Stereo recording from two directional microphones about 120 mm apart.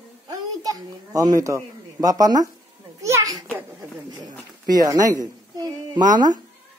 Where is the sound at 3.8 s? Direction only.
35° right (ahead or behind).